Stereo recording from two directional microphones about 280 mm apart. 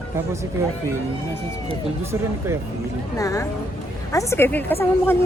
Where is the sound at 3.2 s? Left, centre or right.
Centre.